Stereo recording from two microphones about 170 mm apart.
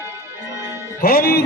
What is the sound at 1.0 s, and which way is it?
Music, 60° left (ahead or behind).